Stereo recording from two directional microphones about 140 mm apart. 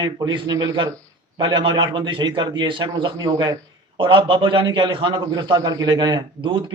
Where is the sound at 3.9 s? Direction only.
40° right (ahead or behind).